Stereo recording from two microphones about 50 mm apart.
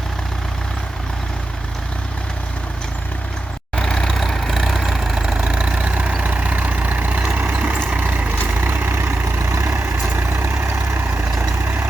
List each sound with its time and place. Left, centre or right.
3.8 s vehicle: centre; by 8.3 s right
8.6 s vehicle: right
9.5 s vehicle: right
9.7 s vehicle: right